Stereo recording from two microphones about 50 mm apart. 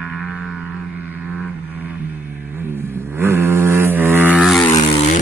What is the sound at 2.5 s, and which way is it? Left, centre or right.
Vehicle, right.